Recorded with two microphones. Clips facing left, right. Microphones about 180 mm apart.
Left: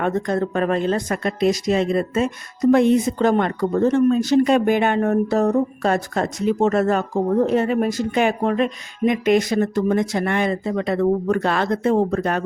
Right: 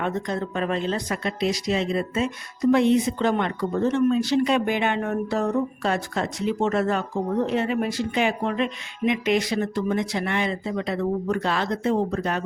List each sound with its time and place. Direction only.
0.0 s speech: 50° left (ahead or behind)